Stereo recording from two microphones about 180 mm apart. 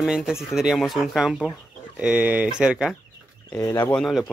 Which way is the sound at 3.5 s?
20° left (ahead or behind).